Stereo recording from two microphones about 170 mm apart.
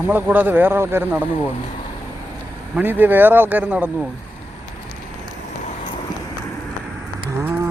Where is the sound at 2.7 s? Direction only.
10° right (ahead or behind).